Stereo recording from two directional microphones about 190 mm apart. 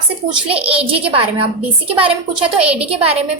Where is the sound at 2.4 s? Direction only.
5° right (ahead or behind).